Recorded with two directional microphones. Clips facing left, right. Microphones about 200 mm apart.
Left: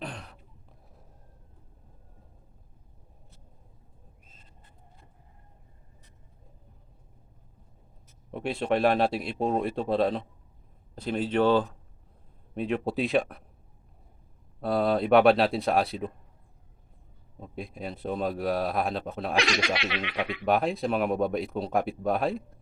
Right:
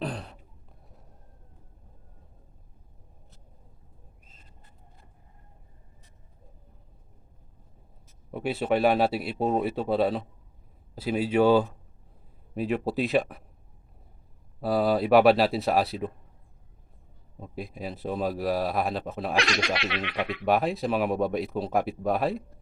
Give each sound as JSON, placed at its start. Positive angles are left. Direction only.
{"t": 0.0, "sound": "a sound", "side_deg": -35}
{"t": 8.3, "sound": "speech", "side_deg": -5}
{"t": 14.6, "sound": "speech", "side_deg": -5}
{"t": 17.4, "sound": "speech", "side_deg": 0}